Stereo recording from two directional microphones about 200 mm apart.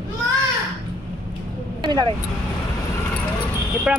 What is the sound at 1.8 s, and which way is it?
Vehicle, 20° right (ahead or behind).